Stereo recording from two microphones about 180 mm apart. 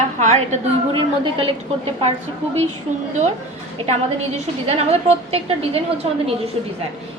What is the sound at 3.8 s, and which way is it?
Speech, 35° right (ahead or behind).